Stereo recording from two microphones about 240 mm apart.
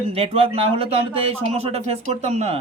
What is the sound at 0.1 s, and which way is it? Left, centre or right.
A man's voice, right.